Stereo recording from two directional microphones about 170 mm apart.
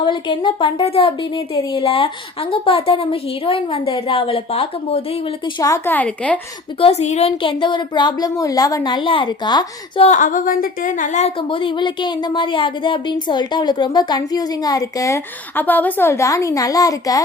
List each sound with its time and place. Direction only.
0.0 s a woman's voice: 25° left (ahead or behind)
5.5 s a woman's voice: 20° left (ahead or behind)
6.7 s speech: 35° left (ahead or behind)
10.1 s a woman's voice: 50° left (ahead or behind)
11.3 s speech: 30° left (ahead or behind)